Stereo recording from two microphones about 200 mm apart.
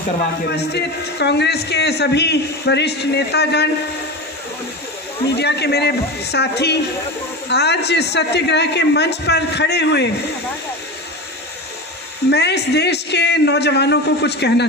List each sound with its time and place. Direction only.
0.5 s a man's voice: 55° left (ahead or behind)
5.3 s a man's voice: 55° left (ahead or behind)
12.3 s a man's voice: 55° left (ahead or behind)